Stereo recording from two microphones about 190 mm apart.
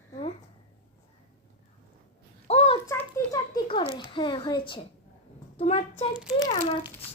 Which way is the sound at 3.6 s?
30° left (ahead or behind).